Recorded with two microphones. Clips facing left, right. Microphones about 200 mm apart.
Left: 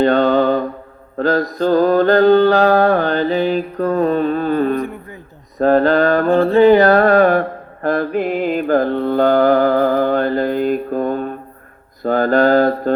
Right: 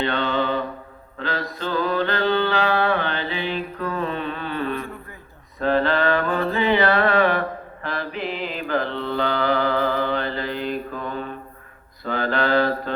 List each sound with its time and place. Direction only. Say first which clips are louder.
0.0 s mantra: left 10 dB; 45° left (ahead or behind)
6.3 s music: left 10 dB; 30° left (ahead or behind)
6.6 s mantra: left 10 dB; 45° left (ahead or behind)